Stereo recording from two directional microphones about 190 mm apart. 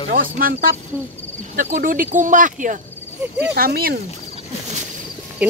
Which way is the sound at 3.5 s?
50° right (ahead or behind).